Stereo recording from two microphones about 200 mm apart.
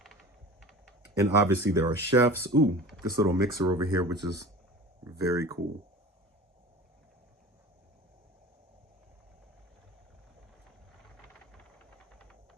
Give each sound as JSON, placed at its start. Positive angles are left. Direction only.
{"t": 0.6, "sound": "typing", "side_deg": 0}
{"t": 1.2, "sound": "speech", "side_deg": -15}